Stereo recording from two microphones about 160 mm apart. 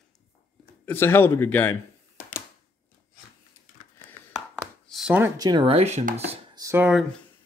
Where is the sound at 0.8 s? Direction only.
15° left (ahead or behind).